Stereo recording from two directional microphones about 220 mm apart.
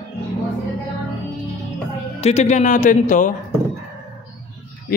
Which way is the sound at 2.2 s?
30° left (ahead or behind).